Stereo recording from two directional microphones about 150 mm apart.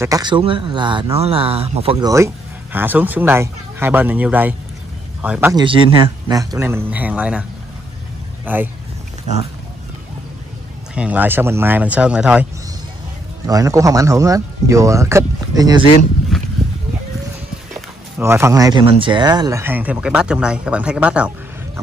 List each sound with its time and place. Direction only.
0.0 s speech: 25° right (ahead or behind)
2.0 s speech: 20° right (ahead or behind)
5.5 s speech: 30° right (ahead or behind); by 7.4 s 10° right (ahead or behind)
8.5 s speech: 10° right (ahead or behind)
11.0 s speech: 10° right (ahead or behind)
13.5 s speech: 20° right (ahead or behind)
16.3 s a sound: centre (ahead or behind)
18.2 s speech: 15° right (ahead or behind)